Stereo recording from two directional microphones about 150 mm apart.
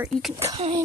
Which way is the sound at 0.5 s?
40° right (ahead or behind).